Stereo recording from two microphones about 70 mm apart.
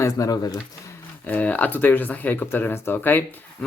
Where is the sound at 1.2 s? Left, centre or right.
Left.